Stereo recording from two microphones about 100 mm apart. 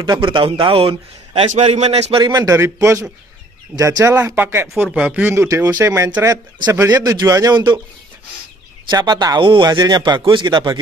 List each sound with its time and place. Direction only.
0.2 s a man's voice: 60° right (ahead or behind); by 2.1 s 90° right
2.2 s a man's voice: 35° right (ahead or behind)
4.4 s speech: 20° right (ahead or behind)
7.0 s a man's voice: 40° right (ahead or behind)
8.9 s a man's voice: 40° right (ahead or behind)
9.4 s speech: 60° right (ahead or behind)
9.7 s speech: 40° right (ahead or behind)